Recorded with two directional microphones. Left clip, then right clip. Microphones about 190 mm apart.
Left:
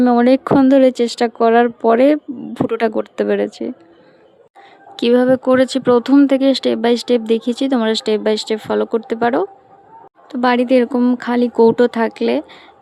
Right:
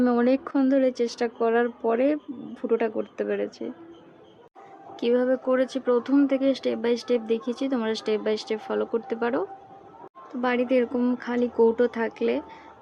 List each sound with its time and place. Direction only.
0.0 s speech: 45° left (ahead or behind)
4.9 s speech: 55° left (ahead or behind)